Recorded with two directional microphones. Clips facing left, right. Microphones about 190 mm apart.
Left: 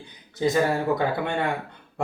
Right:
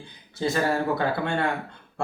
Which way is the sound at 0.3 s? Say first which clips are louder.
Left 2 dB; 15° left (ahead or behind).